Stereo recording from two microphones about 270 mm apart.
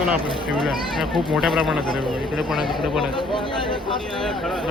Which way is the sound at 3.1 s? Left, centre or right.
Centre.